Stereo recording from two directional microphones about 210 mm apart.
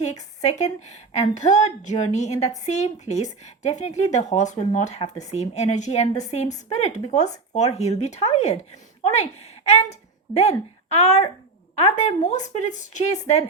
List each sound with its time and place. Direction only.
0.0 s a woman's voice: 30° left (ahead or behind)